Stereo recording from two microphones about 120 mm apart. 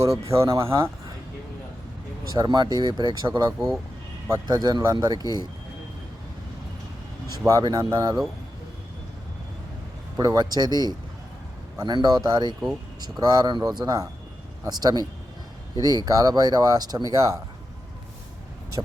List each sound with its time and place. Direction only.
0.0 s speech: 25° right (ahead or behind)
2.3 s speech: 35° right (ahead or behind)
4.4 s speech: 35° right (ahead or behind)
7.4 s speech: 30° right (ahead or behind)
10.2 s speech: 35° right (ahead or behind)